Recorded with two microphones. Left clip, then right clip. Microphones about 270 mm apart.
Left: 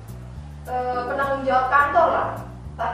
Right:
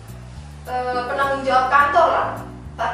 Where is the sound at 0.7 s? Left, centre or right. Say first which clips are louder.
Right 2 dB; centre.